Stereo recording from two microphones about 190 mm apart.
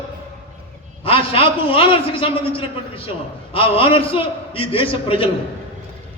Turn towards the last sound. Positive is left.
turn(degrees=30)  # may be behind; listen again after turning